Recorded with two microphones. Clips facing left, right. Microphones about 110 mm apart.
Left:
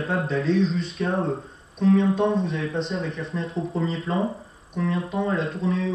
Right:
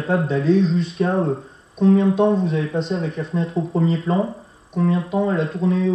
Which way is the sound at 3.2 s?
30° right (ahead or behind).